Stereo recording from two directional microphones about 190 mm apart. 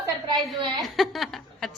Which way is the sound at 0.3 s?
25° right (ahead or behind).